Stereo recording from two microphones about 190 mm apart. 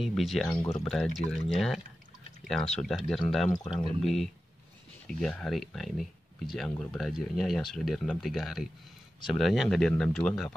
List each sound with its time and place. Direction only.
0.0 s speech: centre (ahead or behind)
0.6 s speech: 15° left (ahead or behind)
0.8 s speech: centre (ahead or behind)
2.8 s speech: centre (ahead or behind)